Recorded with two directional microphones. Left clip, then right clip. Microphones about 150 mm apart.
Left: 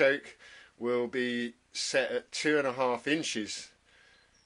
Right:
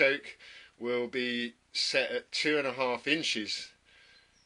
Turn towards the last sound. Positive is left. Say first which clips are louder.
# right 3 dB
turn(degrees=5)  # may be behind; listen again after turning